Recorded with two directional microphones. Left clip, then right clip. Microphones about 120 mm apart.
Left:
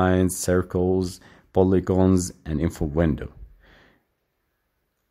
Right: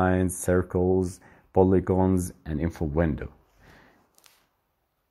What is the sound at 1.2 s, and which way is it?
Speech, 10° left (ahead or behind).